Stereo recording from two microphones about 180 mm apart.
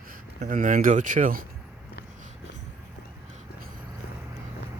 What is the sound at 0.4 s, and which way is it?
Speech, 50° right (ahead or behind).